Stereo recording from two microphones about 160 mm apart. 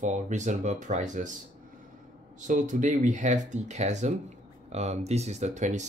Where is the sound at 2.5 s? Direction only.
55° right (ahead or behind).